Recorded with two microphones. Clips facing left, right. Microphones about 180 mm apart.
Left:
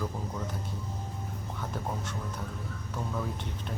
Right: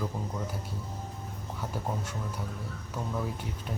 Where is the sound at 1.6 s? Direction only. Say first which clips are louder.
Right 2 dB; 10° right (ahead or behind).